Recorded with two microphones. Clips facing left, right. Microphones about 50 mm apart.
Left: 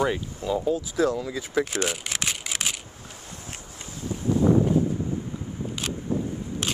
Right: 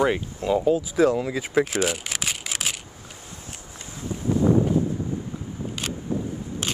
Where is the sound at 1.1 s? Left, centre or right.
Right.